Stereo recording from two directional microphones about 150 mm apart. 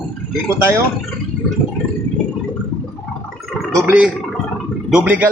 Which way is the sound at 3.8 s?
10° right (ahead or behind).